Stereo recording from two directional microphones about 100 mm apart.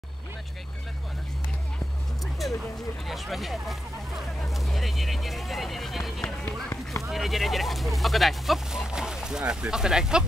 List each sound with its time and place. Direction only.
2.4 s speech: centre (ahead or behind)
6.2 s speech: 20° left (ahead or behind)
7.0 s speech: centre (ahead or behind)